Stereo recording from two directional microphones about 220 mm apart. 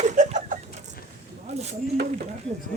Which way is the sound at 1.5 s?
30° right (ahead or behind).